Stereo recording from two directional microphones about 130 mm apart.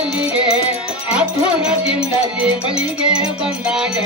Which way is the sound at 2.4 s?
5° right (ahead or behind).